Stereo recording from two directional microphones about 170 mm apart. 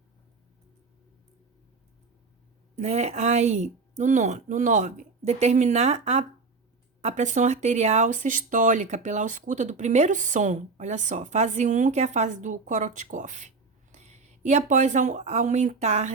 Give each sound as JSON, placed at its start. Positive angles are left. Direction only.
{"t": 2.7, "sound": "speech", "side_deg": -40}